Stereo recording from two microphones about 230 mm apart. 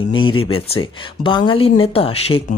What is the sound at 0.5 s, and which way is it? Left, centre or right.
Speech, left.